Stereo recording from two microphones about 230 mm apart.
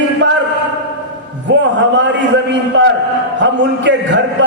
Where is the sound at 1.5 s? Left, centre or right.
Right.